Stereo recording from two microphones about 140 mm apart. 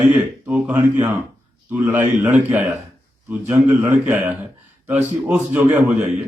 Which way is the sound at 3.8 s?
15° right (ahead or behind).